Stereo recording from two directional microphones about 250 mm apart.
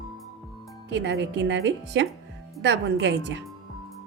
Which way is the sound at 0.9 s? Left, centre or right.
Right.